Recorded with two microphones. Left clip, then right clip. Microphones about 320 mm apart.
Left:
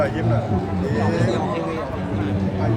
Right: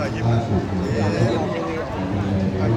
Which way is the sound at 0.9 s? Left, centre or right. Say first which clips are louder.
Even; left.